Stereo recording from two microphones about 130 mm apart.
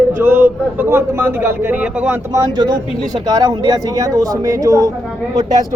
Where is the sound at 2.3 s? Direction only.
30° right (ahead or behind).